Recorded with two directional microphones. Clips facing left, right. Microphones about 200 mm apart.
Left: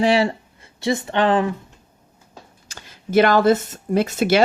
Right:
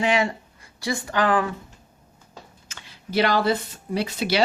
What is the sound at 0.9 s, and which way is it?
Speech, 25° left (ahead or behind).